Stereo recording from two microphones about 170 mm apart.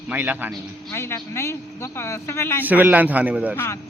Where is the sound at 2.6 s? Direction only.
10° right (ahead or behind).